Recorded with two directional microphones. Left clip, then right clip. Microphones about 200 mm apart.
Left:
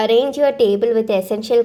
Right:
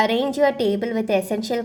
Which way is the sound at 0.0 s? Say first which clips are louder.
Left 4 dB; 15° left (ahead or behind).